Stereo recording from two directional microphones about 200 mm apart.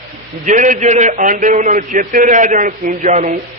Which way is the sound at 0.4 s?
40° right (ahead or behind).